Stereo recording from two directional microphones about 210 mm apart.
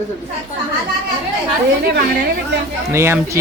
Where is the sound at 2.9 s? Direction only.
10° right (ahead or behind).